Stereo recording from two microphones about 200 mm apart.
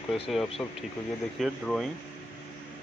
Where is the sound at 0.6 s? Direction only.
5° left (ahead or behind).